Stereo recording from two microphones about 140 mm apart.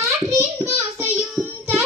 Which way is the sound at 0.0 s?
20° right (ahead or behind).